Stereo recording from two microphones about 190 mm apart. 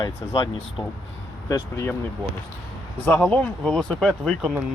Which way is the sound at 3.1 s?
5° left (ahead or behind).